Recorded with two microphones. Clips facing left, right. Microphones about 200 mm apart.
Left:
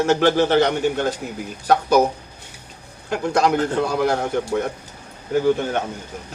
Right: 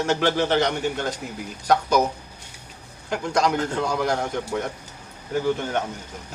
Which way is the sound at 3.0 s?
55° left (ahead or behind).